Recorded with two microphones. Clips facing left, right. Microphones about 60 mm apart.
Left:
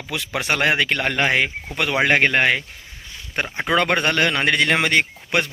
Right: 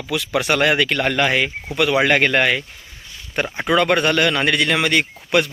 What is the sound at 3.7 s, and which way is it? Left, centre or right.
Speech, left.